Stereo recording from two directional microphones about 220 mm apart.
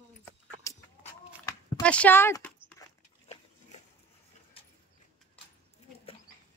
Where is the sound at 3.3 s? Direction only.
30° left (ahead or behind).